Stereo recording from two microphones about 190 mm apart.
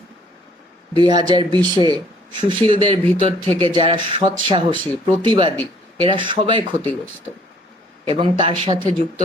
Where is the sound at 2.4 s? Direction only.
25° right (ahead or behind).